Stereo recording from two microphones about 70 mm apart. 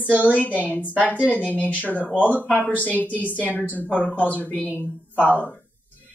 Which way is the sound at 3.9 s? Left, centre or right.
Left.